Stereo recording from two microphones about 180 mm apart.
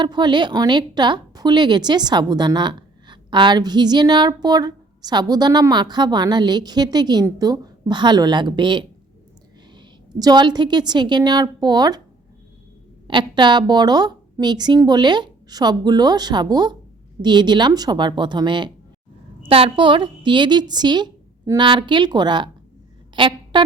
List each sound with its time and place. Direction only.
0.0 s a woman's voice: 25° right (ahead or behind)
13.1 s a woman's voice: 25° right (ahead or behind)